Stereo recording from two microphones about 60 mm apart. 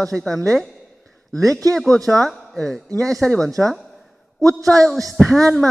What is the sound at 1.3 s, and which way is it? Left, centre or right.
Speech, right.